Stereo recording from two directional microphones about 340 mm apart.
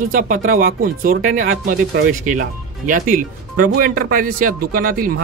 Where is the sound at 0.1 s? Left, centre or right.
Right.